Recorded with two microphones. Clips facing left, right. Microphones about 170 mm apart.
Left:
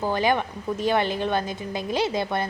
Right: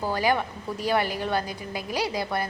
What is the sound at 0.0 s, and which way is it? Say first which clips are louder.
A woman's voice: left 2 dB; 20° left (ahead or behind).